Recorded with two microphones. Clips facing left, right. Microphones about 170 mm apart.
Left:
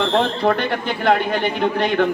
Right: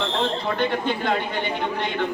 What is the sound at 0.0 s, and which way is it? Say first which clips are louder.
Speech: left 7 dB; 90° left.